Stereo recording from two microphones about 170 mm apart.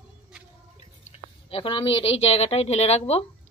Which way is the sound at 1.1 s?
35° left (ahead or behind).